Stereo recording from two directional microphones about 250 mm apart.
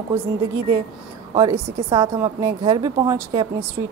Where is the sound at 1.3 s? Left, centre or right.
Centre.